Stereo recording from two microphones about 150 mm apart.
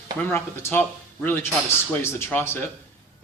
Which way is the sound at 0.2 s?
15° left (ahead or behind).